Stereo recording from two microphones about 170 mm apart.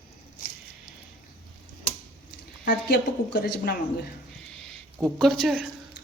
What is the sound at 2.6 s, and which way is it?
Speech, 60° left (ahead or behind).